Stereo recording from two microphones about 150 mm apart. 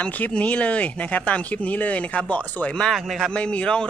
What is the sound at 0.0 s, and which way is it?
Speech, 10° left (ahead or behind).